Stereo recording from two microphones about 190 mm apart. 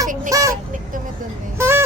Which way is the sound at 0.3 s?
20° right (ahead or behind).